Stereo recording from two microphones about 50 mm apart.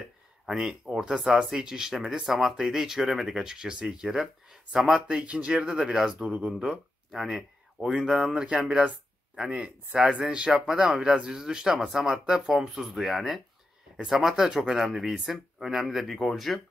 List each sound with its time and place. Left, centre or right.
0.5 s speech: centre
5.0 s speech: right; by 16.6 s centre